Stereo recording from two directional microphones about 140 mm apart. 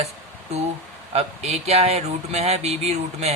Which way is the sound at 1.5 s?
50° right (ahead or behind).